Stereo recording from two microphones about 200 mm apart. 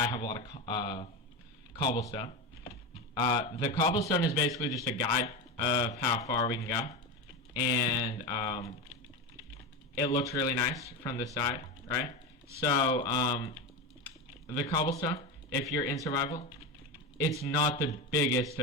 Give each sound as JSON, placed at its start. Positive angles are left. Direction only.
{"t": 0.0, "sound": "speech", "side_deg": 20}
{"t": 10.0, "sound": "speech", "side_deg": 20}
{"t": 14.6, "sound": "speech", "side_deg": 20}
{"t": 17.4, "sound": "speech", "side_deg": 20}